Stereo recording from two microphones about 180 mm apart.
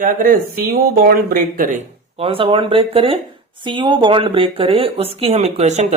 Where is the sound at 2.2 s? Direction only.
30° right (ahead or behind).